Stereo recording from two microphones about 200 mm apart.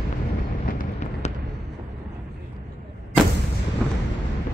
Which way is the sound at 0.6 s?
45° left (ahead or behind).